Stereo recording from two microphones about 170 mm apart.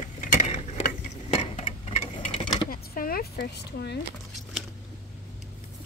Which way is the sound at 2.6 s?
55° left (ahead or behind).